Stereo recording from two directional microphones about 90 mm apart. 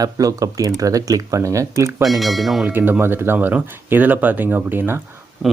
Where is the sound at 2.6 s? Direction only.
20° right (ahead or behind).